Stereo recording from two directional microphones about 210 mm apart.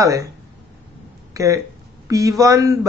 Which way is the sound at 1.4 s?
15° right (ahead or behind).